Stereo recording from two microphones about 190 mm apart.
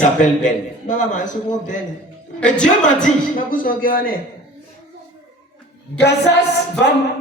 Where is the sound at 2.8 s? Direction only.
45° left (ahead or behind).